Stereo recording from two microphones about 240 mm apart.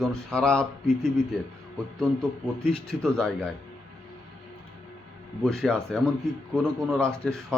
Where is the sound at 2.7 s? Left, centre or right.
Centre.